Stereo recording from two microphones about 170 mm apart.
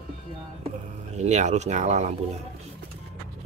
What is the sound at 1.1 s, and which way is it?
Speech, 45° right (ahead or behind).